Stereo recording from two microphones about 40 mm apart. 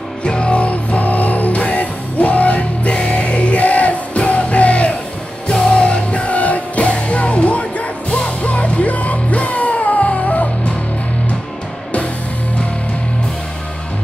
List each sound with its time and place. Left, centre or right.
0.2 s music: left